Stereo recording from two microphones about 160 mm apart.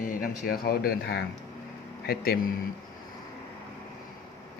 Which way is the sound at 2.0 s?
70° left (ahead or behind).